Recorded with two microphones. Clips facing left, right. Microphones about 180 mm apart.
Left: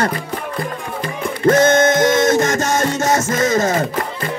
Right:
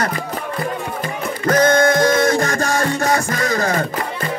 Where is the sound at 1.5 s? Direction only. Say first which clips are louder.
Left 1 dB; 25° left (ahead or behind).